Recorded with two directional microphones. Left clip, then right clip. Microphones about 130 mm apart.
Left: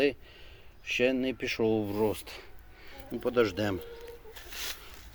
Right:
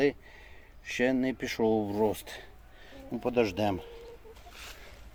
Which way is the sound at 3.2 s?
45° right (ahead or behind).